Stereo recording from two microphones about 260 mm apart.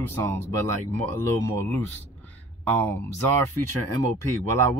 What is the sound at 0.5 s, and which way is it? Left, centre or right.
Speech, right.